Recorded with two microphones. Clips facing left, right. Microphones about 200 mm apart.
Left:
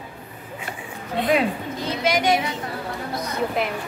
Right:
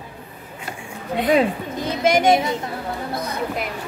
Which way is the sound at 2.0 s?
50° right (ahead or behind).